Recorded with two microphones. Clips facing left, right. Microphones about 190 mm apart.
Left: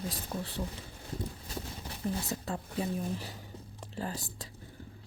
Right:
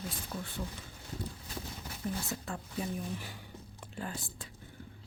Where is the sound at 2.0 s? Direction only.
35° left (ahead or behind).